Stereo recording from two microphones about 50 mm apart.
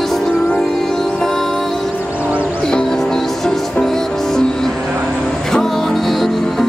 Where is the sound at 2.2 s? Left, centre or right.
Right.